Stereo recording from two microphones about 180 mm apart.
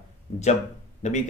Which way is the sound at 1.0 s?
40° left (ahead or behind).